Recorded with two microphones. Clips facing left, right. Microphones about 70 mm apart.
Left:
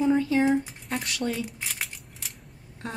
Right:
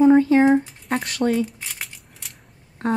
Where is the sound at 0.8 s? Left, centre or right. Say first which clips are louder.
Right 8 dB; right.